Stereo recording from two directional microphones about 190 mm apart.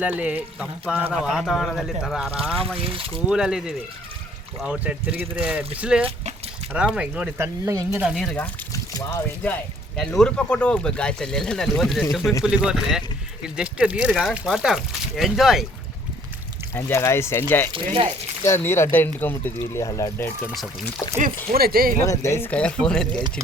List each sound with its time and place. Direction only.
0.0 s speech: 5° right (ahead or behind)
2.6 s speech: 30° right (ahead or behind)
3.2 s speech: 5° right (ahead or behind)
6.1 s a sound: 30° right (ahead or behind)
6.7 s speech: 5° right (ahead or behind)
7.9 s speech: centre (ahead or behind)
8.7 s speech: 15° left (ahead or behind); by 15.6 s centre (ahead or behind)
16.7 s speech: 15° left (ahead or behind)
17.7 s speech: 25° right (ahead or behind)
18.4 s speech: 15° left (ahead or behind)
21.5 s speech: 50° right (ahead or behind)
22.0 s speech: 15° left (ahead or behind)